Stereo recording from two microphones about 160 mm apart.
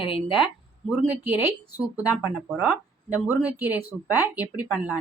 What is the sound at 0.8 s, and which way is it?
Speech, 10° right (ahead or behind).